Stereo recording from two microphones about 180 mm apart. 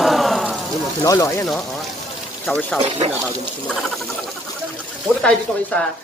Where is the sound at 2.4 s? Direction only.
5° left (ahead or behind).